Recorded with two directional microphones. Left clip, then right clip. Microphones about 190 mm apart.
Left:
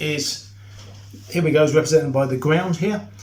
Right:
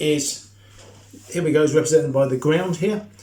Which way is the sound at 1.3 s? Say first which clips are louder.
Left 1 dB; 5° left (ahead or behind).